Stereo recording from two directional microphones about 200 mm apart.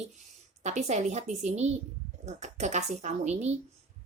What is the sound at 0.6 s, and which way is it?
A woman's voice, 35° right (ahead or behind).